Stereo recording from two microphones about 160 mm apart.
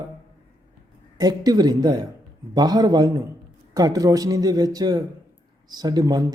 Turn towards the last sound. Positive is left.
turn(degrees=-25)  # may be behind; listen again after turning